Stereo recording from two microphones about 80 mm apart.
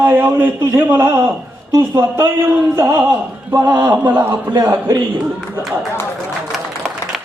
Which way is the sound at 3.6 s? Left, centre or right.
Right.